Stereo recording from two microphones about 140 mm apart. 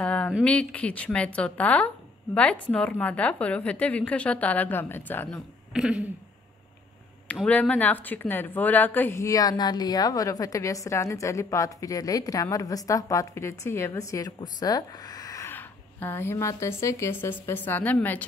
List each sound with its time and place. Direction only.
0.0 s a sound: 10° left (ahead or behind)
0.4 s a woman's voice: 10° left (ahead or behind)
5.7 s speech: 5° right (ahead or behind)
7.4 s a woman's voice: 10° left (ahead or behind)